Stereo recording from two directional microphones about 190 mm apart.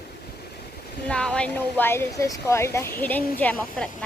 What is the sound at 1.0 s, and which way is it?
A woman's voice, 5° left (ahead or behind).